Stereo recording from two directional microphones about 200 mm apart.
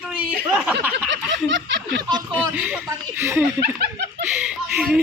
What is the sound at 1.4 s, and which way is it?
Snicker, 65° right (ahead or behind).